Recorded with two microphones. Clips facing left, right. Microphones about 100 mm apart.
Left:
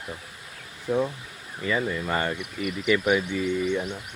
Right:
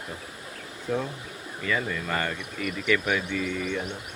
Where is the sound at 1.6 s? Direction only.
25° left (ahead or behind).